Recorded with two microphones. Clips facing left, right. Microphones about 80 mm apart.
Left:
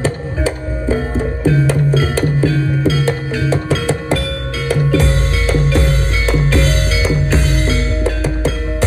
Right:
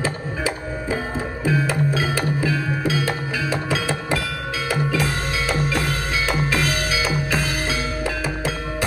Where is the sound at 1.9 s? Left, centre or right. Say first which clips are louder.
Left 6 dB; left.